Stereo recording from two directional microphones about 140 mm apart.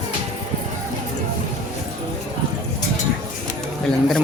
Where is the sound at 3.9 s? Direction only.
5° left (ahead or behind).